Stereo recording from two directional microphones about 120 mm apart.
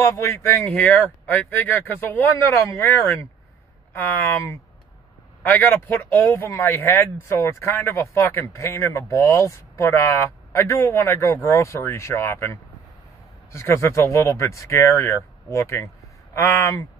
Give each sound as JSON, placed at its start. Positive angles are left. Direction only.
{"t": 0.0, "sound": "speech", "side_deg": 25}